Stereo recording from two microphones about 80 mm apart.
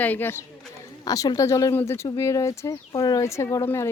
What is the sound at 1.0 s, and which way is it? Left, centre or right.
Speech, left.